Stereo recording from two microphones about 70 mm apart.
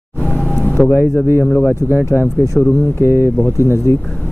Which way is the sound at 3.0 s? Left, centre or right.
Right.